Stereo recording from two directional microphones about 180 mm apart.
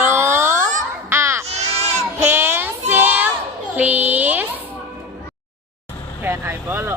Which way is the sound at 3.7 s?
10° right (ahead or behind).